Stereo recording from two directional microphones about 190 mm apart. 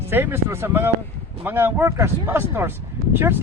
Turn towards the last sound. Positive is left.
turn(degrees=-10)  # may be behind; listen again after turning